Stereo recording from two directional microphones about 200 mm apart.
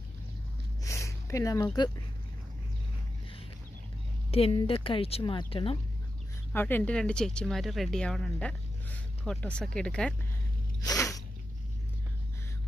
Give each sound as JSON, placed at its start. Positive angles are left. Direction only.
{"t": 0.8, "sound": "a sound", "side_deg": 15}
{"t": 4.3, "sound": "speech", "side_deg": 30}
{"t": 6.5, "sound": "speech", "side_deg": 10}
{"t": 10.8, "sound": "sneeze", "side_deg": 15}